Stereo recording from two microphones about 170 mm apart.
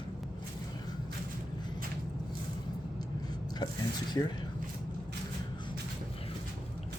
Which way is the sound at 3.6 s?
25° left (ahead or behind).